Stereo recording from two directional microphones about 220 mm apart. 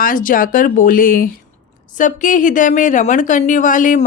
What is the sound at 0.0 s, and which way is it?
A woman's voice, 40° left (ahead or behind).